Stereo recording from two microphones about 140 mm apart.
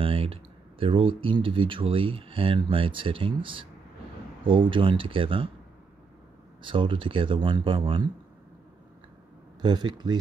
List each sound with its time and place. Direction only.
0.0 s speech: 40° right (ahead or behind)
6.6 s speech: 35° right (ahead or behind)
9.6 s speech: 30° right (ahead or behind)